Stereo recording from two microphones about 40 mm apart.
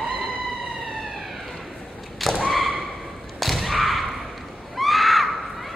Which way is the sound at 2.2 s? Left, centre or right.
Centre.